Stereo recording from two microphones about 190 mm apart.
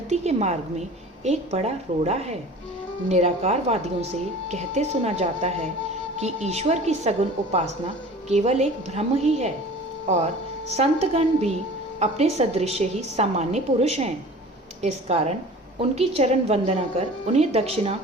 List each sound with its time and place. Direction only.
0.1 s speech: 35° right (ahead or behind)
10.7 s speech: 35° right (ahead or behind)